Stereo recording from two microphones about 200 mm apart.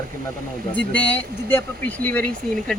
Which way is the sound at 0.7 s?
10° left (ahead or behind).